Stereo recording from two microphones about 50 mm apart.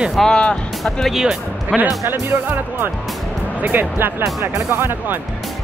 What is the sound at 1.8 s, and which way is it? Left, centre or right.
Speech, right.